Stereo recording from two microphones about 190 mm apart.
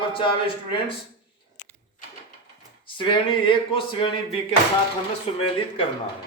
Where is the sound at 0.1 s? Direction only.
25° left (ahead or behind).